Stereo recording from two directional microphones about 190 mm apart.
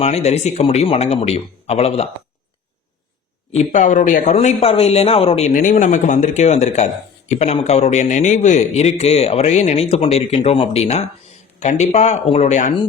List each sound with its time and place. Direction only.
0.0 s speech: 35° left (ahead or behind)
3.6 s speech: 40° left (ahead or behind)
5.5 s speech: 45° left (ahead or behind)